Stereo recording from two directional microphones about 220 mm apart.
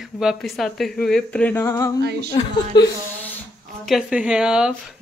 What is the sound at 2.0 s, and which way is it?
Speech, 50° right (ahead or behind).